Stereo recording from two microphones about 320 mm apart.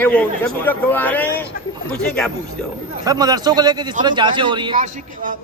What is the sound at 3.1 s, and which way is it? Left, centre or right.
A man's voice, centre.